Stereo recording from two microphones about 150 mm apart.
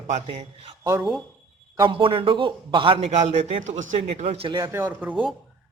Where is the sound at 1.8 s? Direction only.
35° right (ahead or behind).